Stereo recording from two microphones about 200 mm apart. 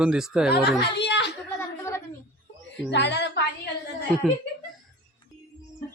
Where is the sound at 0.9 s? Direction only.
60° left (ahead or behind).